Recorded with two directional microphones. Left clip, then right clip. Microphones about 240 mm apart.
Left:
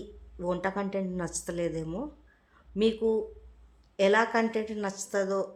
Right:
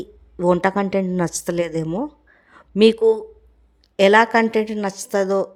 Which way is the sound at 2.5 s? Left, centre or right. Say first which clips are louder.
Right 13 dB; right.